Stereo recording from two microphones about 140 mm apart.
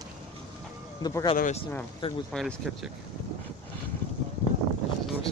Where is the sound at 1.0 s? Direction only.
30° left (ahead or behind).